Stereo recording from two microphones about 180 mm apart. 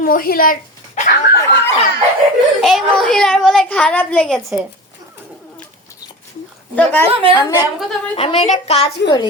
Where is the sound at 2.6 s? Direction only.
Centre (ahead or behind).